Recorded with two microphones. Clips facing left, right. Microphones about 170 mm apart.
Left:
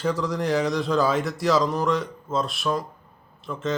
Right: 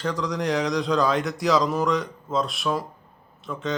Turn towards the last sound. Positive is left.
turn(degrees=0)  # may be behind; listen again after turning